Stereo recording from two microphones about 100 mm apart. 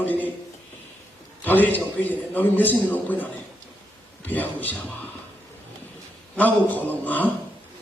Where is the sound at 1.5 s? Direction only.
20° left (ahead or behind).